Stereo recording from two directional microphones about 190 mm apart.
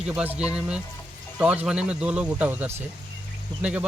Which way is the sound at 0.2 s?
5° right (ahead or behind).